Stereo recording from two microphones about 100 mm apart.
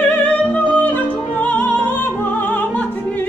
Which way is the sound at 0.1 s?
15° left (ahead or behind).